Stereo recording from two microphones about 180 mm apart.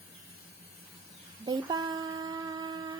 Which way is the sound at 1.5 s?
20° right (ahead or behind).